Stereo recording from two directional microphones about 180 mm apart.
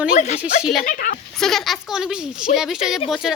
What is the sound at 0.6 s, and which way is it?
Speech, centre (ahead or behind).